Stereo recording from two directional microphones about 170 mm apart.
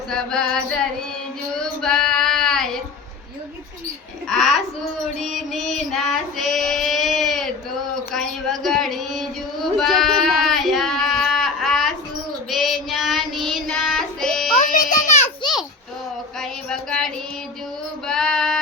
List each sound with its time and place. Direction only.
0.1 s music: 5° left (ahead or behind)
1.5 s child singing: 5° left (ahead or behind)
4.3 s music: centre (ahead or behind)
5.1 s female singing: centre (ahead or behind)
8.1 s a sound: centre (ahead or behind)
12.5 s child singing: centre (ahead or behind)
14.7 s a sound: 50° left (ahead or behind)
16.4 s a sound: 5° left (ahead or behind)
18.0 s female singing: 5° left (ahead or behind)